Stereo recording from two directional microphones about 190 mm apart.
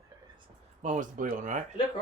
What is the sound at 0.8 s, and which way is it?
Speech, 40° right (ahead or behind).